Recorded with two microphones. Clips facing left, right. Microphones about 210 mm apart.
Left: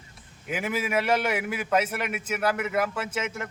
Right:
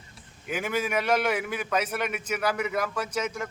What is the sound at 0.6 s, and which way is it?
A man's voice, 5° left (ahead or behind).